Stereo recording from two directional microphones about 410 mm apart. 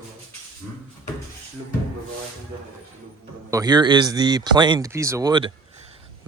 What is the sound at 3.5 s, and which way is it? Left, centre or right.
Speech, centre.